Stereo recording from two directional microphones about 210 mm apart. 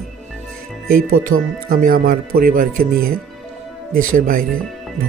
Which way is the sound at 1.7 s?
40° right (ahead or behind).